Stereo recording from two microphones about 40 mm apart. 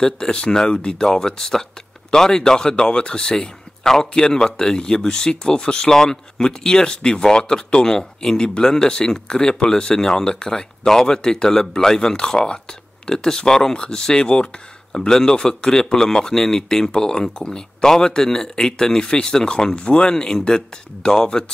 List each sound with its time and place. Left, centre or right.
0.0 s speech: centre
14.9 s speech: centre